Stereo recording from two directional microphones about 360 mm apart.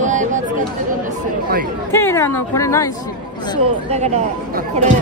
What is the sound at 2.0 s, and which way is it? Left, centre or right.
Speech, centre.